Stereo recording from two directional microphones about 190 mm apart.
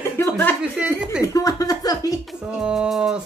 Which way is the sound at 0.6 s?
5° right (ahead or behind).